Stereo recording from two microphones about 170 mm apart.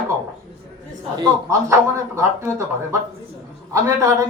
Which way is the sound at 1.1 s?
20° right (ahead or behind).